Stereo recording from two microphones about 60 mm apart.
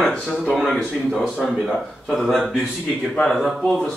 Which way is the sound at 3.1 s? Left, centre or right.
Centre.